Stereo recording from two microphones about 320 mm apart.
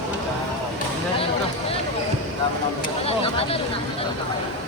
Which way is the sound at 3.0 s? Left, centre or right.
Centre.